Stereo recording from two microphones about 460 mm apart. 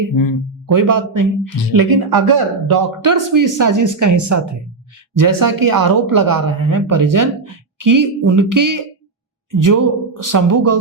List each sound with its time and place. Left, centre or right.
0.1 s speech: left
0.7 s speech: right